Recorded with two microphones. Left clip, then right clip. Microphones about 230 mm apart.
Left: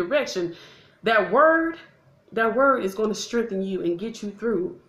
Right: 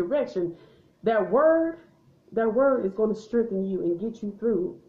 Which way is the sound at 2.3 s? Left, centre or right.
Left.